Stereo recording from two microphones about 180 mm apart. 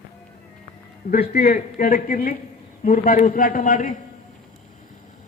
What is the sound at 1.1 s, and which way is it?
Speech, 60° left (ahead or behind).